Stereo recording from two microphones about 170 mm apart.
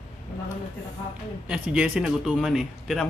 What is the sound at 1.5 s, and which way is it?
Speech, 5° right (ahead or behind).